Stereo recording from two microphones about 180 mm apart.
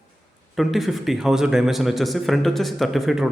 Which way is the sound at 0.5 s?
Centre (ahead or behind).